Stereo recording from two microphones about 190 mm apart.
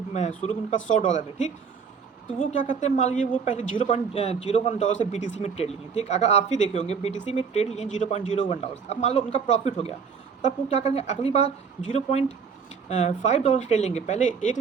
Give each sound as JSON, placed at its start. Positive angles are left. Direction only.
{"t": 0.1, "sound": "a woman's voice", "side_deg": 40}